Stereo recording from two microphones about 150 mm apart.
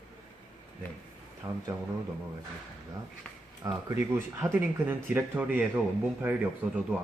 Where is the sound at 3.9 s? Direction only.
20° right (ahead or behind).